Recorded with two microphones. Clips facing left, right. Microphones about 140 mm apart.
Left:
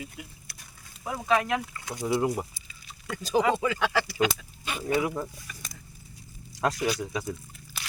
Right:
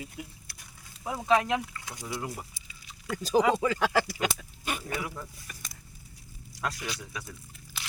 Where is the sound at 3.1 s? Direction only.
35° right (ahead or behind).